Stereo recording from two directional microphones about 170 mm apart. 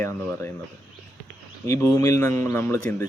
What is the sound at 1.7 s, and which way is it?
Speech, 15° left (ahead or behind).